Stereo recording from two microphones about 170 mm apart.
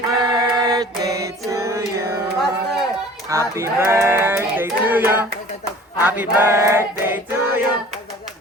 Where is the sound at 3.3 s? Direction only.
15° right (ahead or behind).